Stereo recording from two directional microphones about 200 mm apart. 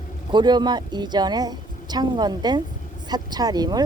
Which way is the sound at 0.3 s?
20° right (ahead or behind).